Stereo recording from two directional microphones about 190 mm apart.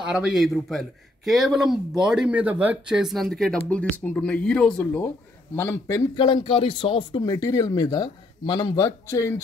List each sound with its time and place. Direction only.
0.1 s a man's voice: centre (ahead or behind); by 9.3 s 15° left (ahead or behind)